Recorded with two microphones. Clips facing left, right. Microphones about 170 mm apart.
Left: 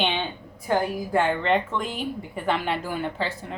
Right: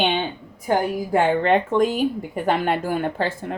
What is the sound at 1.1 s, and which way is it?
Speech, 50° right (ahead or behind).